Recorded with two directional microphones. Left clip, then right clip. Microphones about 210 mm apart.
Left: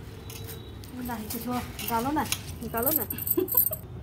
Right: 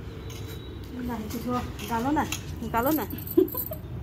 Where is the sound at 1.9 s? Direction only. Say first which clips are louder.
Right 1 dB; 30° right (ahead or behind).